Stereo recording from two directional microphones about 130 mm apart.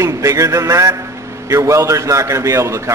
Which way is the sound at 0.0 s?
25° right (ahead or behind).